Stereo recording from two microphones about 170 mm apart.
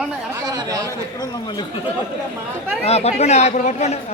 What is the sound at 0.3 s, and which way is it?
Chatter, 20° right (ahead or behind).